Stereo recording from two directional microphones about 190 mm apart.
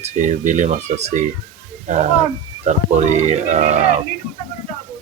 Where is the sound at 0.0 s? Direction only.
40° right (ahead or behind).